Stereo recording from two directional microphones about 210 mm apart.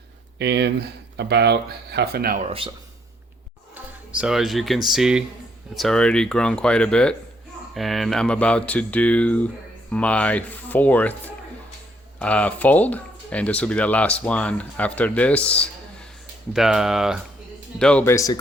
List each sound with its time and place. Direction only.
0.3 s speech: 55° right (ahead or behind)
2.4 s speech: 25° right (ahead or behind)
4.2 s speech: centre (ahead or behind)
12.2 s speech: 5° left (ahead or behind)